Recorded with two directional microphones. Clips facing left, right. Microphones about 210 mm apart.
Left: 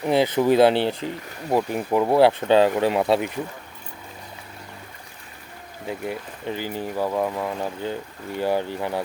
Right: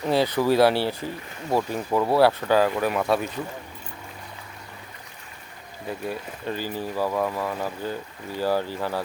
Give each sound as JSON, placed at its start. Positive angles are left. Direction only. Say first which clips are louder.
{"t": 0.0, "sound": "speech", "louder": "left 2 dB", "side_deg": 20}
{"t": 6.1, "sound": "speech", "louder": "right 1 dB", "side_deg": 15}